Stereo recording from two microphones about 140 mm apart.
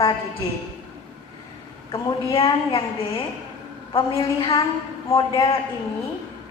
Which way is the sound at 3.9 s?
40° left (ahead or behind).